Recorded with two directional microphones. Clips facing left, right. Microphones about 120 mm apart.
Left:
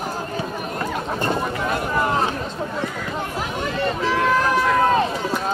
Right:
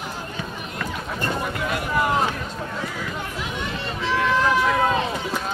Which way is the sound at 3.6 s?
45° left (ahead or behind).